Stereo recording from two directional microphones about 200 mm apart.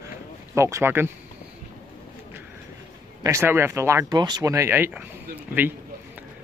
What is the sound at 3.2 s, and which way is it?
Speech, 15° right (ahead or behind).